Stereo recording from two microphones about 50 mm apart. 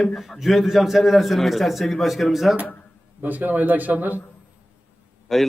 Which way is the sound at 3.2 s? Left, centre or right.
Right.